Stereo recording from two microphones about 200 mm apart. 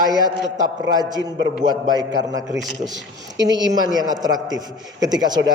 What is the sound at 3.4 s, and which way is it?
A man's voice, 20° right (ahead or behind).